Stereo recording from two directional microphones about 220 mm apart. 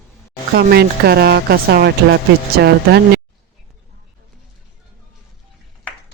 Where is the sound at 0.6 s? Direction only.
45° right (ahead or behind).